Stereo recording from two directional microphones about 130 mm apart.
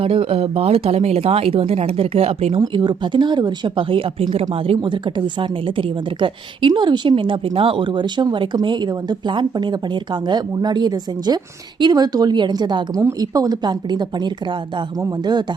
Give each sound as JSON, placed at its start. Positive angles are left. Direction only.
{"t": 0.0, "sound": "speech", "side_deg": -45}
{"t": 2.6, "sound": "a woman's voice", "side_deg": -35}